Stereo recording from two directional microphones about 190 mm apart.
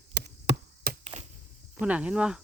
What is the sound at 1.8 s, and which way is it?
Speech, 5° right (ahead or behind).